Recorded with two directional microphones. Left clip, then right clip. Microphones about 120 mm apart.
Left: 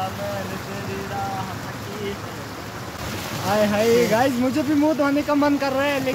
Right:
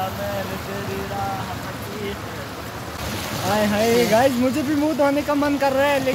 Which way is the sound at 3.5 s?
25° left (ahead or behind).